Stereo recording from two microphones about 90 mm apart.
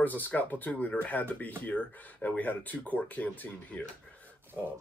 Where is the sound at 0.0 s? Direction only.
20° left (ahead or behind).